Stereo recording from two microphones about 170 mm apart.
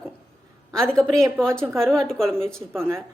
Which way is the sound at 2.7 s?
15° right (ahead or behind).